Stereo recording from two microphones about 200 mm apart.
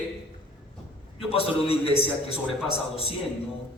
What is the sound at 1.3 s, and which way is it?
A man's voice, 30° left (ahead or behind).